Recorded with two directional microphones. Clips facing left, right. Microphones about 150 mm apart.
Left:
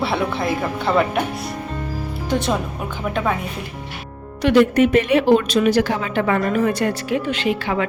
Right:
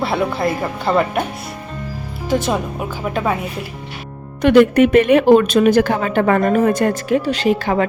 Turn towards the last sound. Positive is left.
turn(degrees=-40)  # may be behind; listen again after turning